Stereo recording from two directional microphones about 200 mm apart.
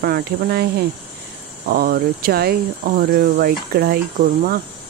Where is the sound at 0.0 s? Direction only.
50° right (ahead or behind).